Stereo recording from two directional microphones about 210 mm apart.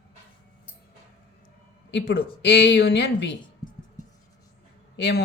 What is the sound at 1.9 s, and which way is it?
Speech, 55° left (ahead or behind).